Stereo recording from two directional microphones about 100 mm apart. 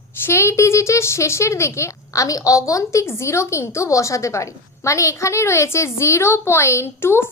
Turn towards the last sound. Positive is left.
turn(degrees=25)  # may be behind; listen again after turning